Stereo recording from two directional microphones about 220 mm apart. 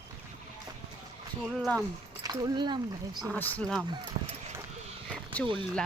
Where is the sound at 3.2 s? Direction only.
5° left (ahead or behind).